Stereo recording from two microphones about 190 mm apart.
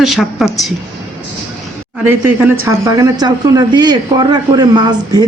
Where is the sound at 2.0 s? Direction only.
10° right (ahead or behind).